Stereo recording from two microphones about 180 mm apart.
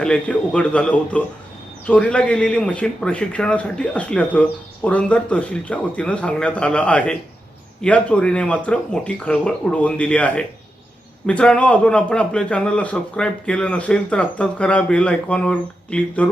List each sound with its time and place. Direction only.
0.0 s a man's voice: 5° left (ahead or behind)